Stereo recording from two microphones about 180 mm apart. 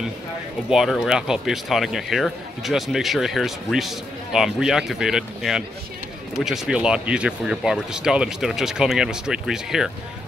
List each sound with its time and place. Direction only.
0.7 s speech: centre (ahead or behind)